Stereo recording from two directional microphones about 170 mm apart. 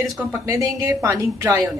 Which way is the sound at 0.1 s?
10° right (ahead or behind).